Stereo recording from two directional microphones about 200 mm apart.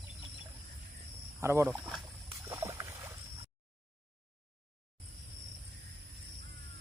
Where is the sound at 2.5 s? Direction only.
15° right (ahead or behind).